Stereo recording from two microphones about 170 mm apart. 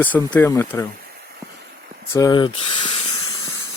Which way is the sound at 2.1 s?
25° left (ahead or behind).